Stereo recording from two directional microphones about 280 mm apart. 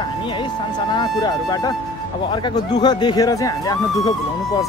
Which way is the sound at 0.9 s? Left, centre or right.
Centre.